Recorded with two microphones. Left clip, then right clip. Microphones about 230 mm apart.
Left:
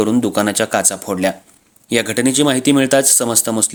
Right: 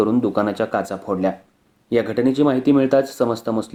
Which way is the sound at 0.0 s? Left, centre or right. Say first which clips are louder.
Left 3 dB; left.